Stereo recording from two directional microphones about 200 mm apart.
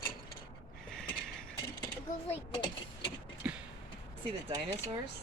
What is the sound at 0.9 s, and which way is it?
Mechanisms, 5° left (ahead or behind).